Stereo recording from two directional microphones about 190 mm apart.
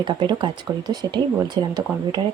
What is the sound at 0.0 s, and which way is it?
Speech, 25° right (ahead or behind).